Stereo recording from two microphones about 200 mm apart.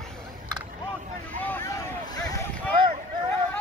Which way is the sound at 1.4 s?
10° left (ahead or behind).